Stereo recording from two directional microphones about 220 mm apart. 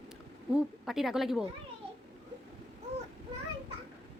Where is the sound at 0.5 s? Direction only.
Centre (ahead or behind).